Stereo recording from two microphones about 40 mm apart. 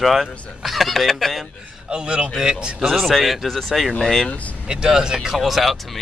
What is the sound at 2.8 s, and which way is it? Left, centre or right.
Speech, centre.